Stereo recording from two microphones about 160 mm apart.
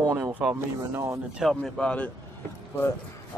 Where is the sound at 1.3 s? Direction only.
Centre (ahead or behind).